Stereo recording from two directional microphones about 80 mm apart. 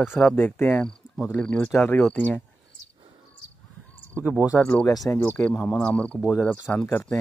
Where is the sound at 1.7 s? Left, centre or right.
Left.